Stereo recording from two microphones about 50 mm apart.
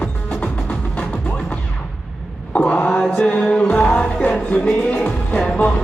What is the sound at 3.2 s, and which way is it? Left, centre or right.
Music, centre.